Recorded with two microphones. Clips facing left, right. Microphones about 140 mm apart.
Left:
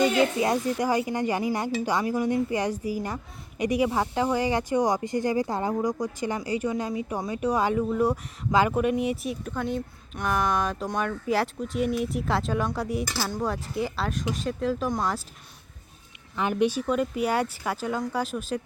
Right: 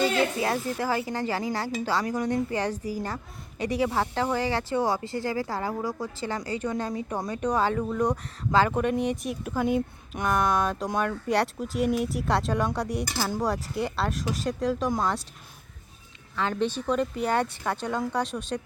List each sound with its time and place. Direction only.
0.0 s speech: 20° left (ahead or behind)
2.1 s speech: 10° left (ahead or behind)
16.3 s speech: 15° left (ahead or behind)